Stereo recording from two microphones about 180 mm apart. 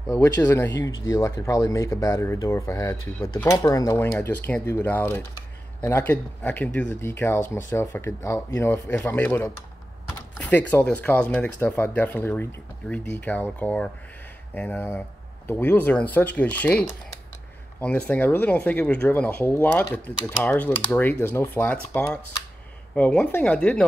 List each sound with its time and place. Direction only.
0.1 s speech: 15° left (ahead or behind)
10.3 s door: 5° left (ahead or behind)
10.7 s speech: 10° left (ahead or behind)